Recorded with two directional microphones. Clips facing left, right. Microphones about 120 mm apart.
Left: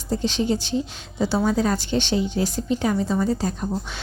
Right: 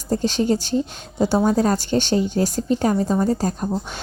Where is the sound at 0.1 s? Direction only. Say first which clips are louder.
Right 3 dB; 45° right (ahead or behind).